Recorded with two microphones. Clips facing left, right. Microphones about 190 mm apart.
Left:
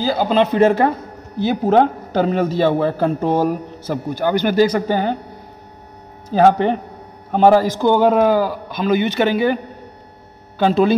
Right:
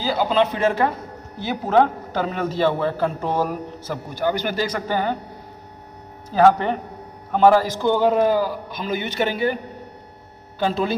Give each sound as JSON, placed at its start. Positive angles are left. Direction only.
{"t": 0.0, "sound": "a man's voice", "side_deg": 45}
{"t": 4.2, "sound": "a man's voice", "side_deg": 65}
{"t": 4.6, "sound": "a man's voice", "side_deg": 35}
{"t": 6.3, "sound": "a man's voice", "side_deg": 30}
{"t": 7.8, "sound": "speech", "side_deg": 60}
{"t": 10.6, "sound": "speech", "side_deg": 75}